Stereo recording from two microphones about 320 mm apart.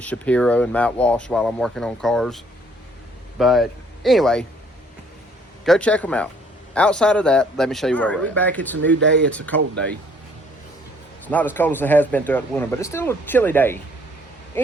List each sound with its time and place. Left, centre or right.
0.0 s speech: centre
5.6 s speech: centre
8.8 s speech: right
9.2 s speech: centre
11.3 s speech: centre